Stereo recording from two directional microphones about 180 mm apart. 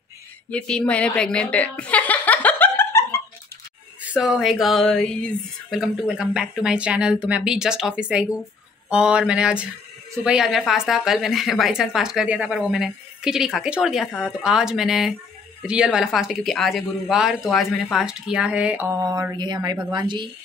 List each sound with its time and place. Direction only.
0.5 s chuckle: 5° left (ahead or behind)
4.0 s speech: 5° right (ahead or behind)
18.9 s speech: 20° right (ahead or behind)